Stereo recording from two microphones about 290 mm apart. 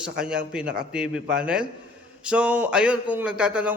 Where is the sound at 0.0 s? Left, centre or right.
Centre.